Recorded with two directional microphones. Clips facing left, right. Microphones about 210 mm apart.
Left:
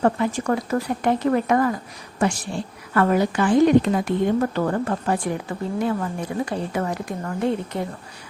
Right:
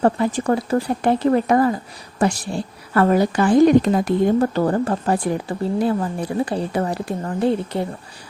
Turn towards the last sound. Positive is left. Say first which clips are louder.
# right 4 dB
turn(degrees=-35)  # may be behind; listen again after turning